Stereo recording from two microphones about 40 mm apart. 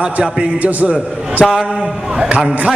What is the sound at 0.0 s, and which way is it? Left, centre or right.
Speech, right.